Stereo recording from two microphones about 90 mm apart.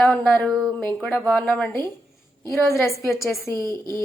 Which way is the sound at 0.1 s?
15° left (ahead or behind).